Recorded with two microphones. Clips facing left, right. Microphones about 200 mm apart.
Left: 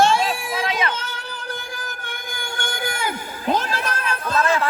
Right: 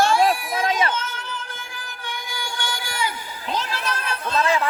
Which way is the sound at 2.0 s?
50° left (ahead or behind).